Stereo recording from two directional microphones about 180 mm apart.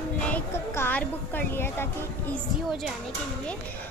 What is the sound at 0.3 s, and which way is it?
Speech, 10° left (ahead or behind).